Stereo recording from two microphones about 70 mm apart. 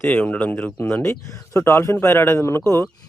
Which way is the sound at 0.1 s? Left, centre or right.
Left.